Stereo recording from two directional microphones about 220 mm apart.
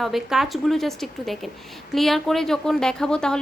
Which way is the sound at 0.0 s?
Centre (ahead or behind).